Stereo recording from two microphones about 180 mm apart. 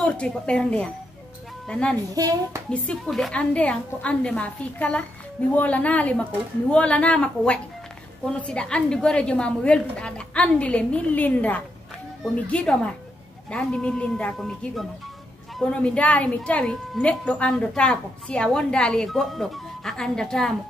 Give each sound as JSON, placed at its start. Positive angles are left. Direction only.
{"t": 0.0, "sound": "speech", "side_deg": 5}
{"t": 2.1, "sound": "a child's voice", "side_deg": -20}
{"t": 2.7, "sound": "a woman's voice", "side_deg": 5}